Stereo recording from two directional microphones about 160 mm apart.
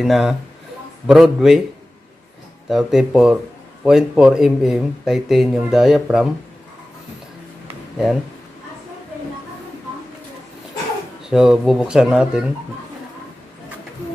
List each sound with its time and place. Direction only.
0.0 s speech: centre (ahead or behind)
2.7 s speech: centre (ahead or behind)
11.2 s speech: 5° right (ahead or behind)